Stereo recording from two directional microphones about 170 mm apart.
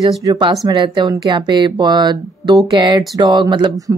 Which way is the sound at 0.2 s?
20° right (ahead or behind).